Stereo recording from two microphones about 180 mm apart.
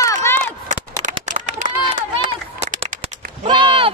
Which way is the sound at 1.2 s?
40° right (ahead or behind).